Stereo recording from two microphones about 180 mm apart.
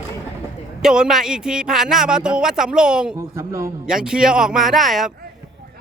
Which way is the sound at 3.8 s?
5° right (ahead or behind).